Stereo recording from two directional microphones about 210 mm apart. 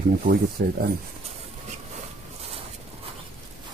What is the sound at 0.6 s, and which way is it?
Speech, 40° right (ahead or behind).